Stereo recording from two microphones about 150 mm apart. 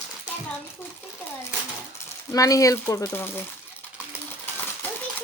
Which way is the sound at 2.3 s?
20° left (ahead or behind).